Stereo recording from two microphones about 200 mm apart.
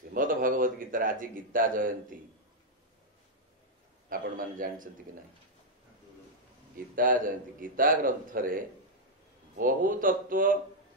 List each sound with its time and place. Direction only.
0.1 s a man's voice: 45° right (ahead or behind)
4.1 s a man's voice: 45° right (ahead or behind)
7.0 s a man's voice: 45° right (ahead or behind)